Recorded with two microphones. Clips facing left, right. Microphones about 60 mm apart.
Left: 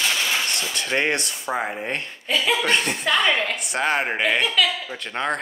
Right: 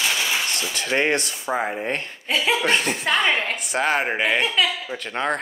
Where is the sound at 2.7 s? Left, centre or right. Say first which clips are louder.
Even; centre.